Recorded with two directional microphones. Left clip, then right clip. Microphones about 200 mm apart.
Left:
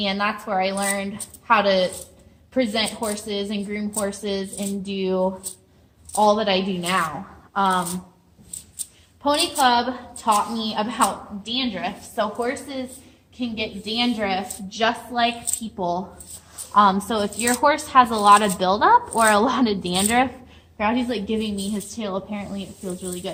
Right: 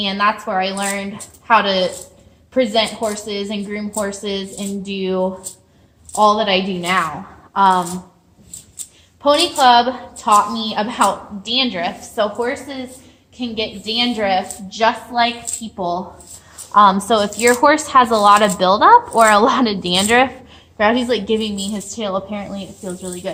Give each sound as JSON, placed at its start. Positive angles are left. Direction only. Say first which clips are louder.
{"t": 0.0, "sound": "a woman's voice", "louder": "right 6 dB", "side_deg": -15}
{"t": 7.5, "sound": "a woman's voice", "louder": "right 7 dB", "side_deg": 5}
{"t": 9.2, "sound": "a woman's voice", "louder": "right 7 dB", "side_deg": -30}
{"t": 12.1, "sound": "a woman's voice", "louder": "right 5 dB", "side_deg": -15}
{"t": 14.8, "sound": "a woman's voice", "louder": "right 5 dB", "side_deg": 0}
{"t": 16.7, "sound": "speech", "louder": "right 6 dB", "side_deg": -25}
{"t": 20.7, "sound": "a woman's voice", "louder": "right 8 dB", "side_deg": -40}
{"t": 21.2, "sound": "speech", "louder": "right 7 dB", "side_deg": -25}